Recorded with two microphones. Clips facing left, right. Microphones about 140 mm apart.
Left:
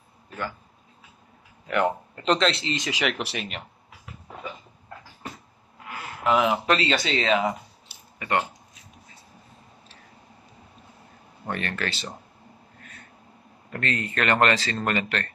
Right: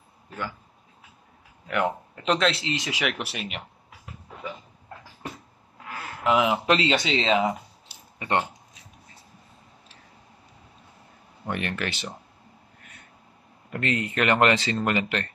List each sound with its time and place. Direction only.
1.7 s speech: 5° right (ahead or behind)
6.2 s speech: 15° right (ahead or behind)
11.4 s speech: 15° right (ahead or behind)
13.7 s speech: 15° right (ahead or behind)